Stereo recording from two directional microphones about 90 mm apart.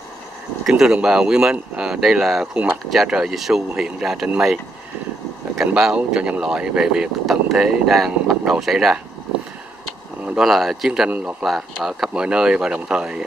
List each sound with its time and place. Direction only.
0.7 s speech: 5° right (ahead or behind)
5.8 s speech: 10° right (ahead or behind)
10.2 s speech: 5° right (ahead or behind)
11.1 s speech: 15° right (ahead or behind)
11.4 s speech: centre (ahead or behind)